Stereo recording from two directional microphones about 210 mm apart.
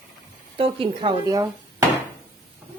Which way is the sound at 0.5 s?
25° right (ahead or behind).